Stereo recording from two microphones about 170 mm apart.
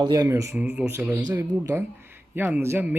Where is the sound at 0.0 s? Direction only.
20° right (ahead or behind).